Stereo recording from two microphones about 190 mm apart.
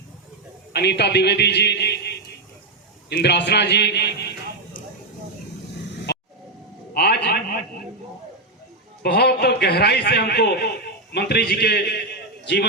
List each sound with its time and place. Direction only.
0.7 s a man's voice: 60° left (ahead or behind)
6.1 s vehicle: 60° left (ahead or behind)
6.9 s a sound: 55° left (ahead or behind)
9.0 s a man's voice: 60° left (ahead or behind)